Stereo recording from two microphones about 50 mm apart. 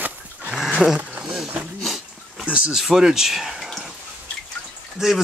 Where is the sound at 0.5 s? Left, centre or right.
Centre.